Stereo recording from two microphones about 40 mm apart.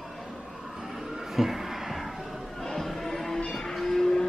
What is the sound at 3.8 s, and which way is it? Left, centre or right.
Livestock, centre.